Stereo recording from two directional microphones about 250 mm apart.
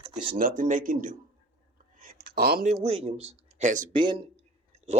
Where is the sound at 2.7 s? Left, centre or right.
Right.